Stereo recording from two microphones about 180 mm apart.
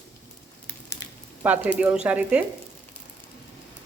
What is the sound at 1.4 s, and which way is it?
A woman's voice, 10° right (ahead or behind).